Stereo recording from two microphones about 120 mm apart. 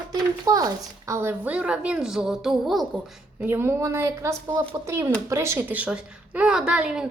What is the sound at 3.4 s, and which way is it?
A woman's voice, 20° right (ahead or behind).